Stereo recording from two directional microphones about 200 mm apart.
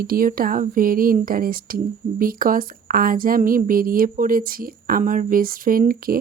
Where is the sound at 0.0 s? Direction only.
45° right (ahead or behind).